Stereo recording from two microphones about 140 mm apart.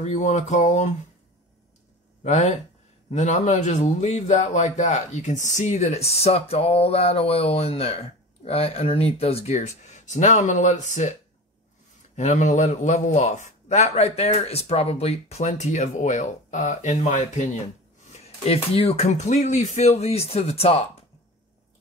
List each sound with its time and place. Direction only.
0.0 s a man's voice: 55° left (ahead or behind)
2.2 s a man's voice: 55° left (ahead or behind)
9.6 s a man's voice: 55° left (ahead or behind)
12.2 s a man's voice: 60° left (ahead or behind)
18.1 s a man's voice: 50° left (ahead or behind)